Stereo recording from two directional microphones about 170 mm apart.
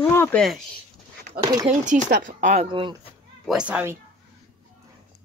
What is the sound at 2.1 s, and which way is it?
Speech, 55° right (ahead or behind).